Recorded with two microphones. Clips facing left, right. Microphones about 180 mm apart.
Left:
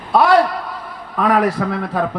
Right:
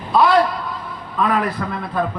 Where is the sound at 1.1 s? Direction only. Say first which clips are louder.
Left 4 dB; 75° left (ahead or behind).